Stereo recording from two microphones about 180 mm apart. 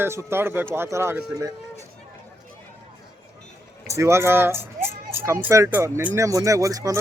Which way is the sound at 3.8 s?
15° right (ahead or behind).